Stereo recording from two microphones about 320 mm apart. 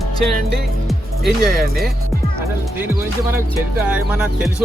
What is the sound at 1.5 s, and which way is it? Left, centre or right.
Speech, right.